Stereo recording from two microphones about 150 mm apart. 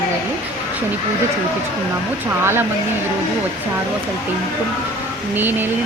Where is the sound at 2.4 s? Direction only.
15° right (ahead or behind).